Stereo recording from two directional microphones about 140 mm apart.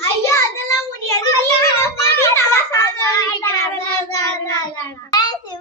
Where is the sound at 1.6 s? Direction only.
20° left (ahead or behind).